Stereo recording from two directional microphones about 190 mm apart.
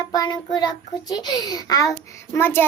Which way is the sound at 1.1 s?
20° left (ahead or behind).